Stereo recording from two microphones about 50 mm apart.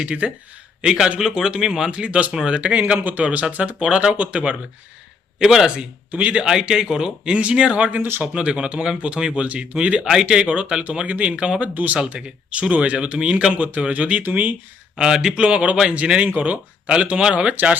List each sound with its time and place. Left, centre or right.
0.0 s speech: right
1.9 s speech: right
5.4 s speech: centre
6.1 s speech: right
6.4 s speech: centre
9.4 s speech: right
10.0 s speech: centre
11.7 s speech: right
14.9 s speech: centre